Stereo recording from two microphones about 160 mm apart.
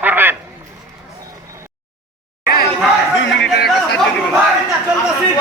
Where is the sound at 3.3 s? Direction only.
90° left.